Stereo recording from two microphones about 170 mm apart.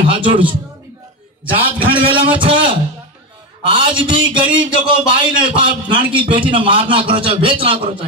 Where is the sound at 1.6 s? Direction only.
30° right (ahead or behind).